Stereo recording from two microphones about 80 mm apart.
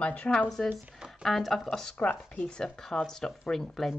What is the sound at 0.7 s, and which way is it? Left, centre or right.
Speech, centre.